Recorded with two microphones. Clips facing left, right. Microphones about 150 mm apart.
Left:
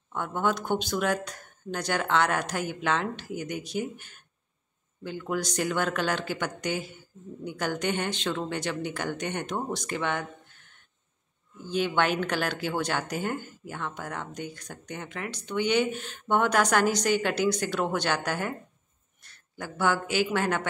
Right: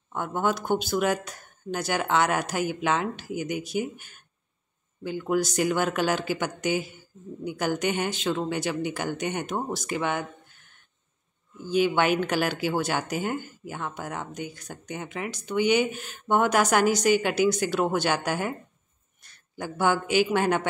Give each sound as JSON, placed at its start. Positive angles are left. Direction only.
{"t": 0.1, "sound": "speech", "side_deg": -10}
{"t": 11.6, "sound": "speech", "side_deg": -10}